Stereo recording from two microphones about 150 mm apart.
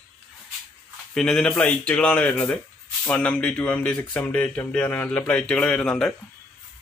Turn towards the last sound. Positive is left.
turn(degrees=5)  # may be behind; listen again after turning